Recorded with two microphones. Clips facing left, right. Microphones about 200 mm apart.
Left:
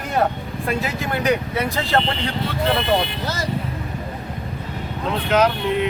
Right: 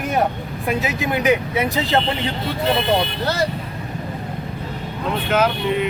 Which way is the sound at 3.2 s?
65° right (ahead or behind).